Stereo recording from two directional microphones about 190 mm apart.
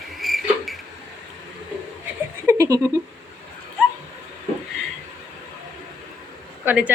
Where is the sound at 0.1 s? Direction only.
Centre (ahead or behind).